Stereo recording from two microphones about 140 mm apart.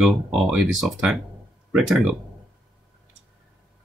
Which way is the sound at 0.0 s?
Centre (ahead or behind).